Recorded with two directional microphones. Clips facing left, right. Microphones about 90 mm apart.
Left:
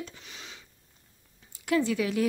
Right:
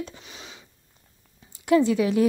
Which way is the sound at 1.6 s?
25° right (ahead or behind).